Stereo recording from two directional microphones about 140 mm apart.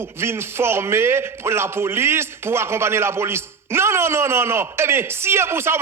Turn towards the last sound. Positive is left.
turn(degrees=-20)  # may be behind; listen again after turning